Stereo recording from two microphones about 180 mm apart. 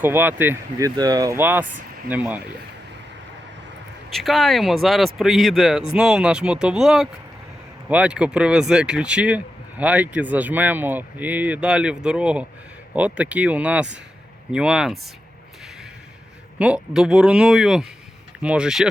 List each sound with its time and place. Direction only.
0.0 s speech: 10° right (ahead or behind)
4.1 s speech: centre (ahead or behind)
16.6 s speech: 5° right (ahead or behind)